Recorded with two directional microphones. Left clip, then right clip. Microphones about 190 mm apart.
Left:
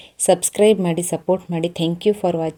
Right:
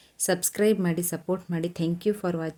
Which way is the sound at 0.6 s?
35° right (ahead or behind).